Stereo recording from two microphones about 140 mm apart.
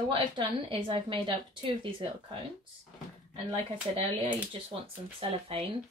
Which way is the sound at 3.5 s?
40° right (ahead or behind).